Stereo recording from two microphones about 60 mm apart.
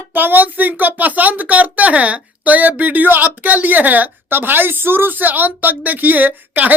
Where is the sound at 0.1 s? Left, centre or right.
Right.